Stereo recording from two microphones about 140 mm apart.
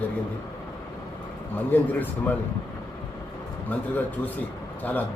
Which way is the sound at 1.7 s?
10° left (ahead or behind).